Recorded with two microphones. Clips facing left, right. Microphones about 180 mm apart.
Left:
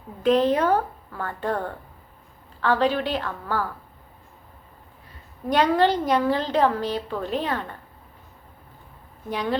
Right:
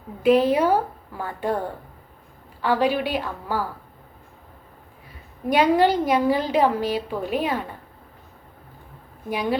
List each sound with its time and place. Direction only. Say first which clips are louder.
0.2 s a woman's voice: right 2 dB; 10° right (ahead or behind)
5.5 s a woman's voice: right 2 dB; 10° right (ahead or behind)
9.3 s a woman's voice: right 2 dB; 10° right (ahead or behind)